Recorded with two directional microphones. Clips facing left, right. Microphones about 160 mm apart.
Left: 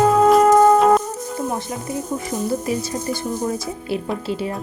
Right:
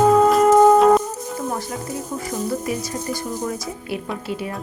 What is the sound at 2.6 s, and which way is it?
Music, 25° left (ahead or behind).